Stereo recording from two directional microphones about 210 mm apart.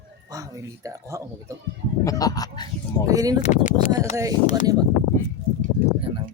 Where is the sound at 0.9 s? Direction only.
15° right (ahead or behind).